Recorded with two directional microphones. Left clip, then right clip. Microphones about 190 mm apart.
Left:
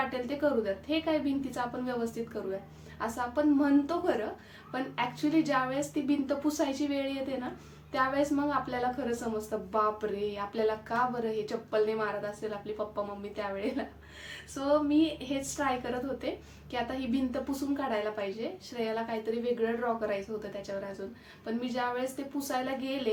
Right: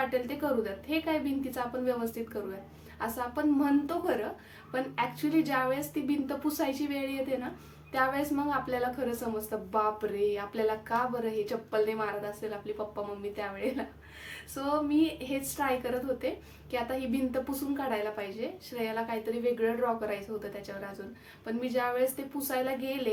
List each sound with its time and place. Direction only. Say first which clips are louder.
0.1 s a woman's voice: left 1 dB; 5° right (ahead or behind)
13.3 s a woman's voice: left 2 dB; 5° right (ahead or behind)